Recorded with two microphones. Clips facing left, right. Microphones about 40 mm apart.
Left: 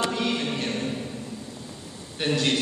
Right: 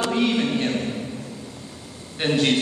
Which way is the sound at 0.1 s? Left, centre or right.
Right.